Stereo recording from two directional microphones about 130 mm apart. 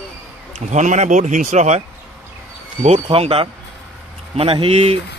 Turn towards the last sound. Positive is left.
turn(degrees=-50)  # may be behind; listen again after turning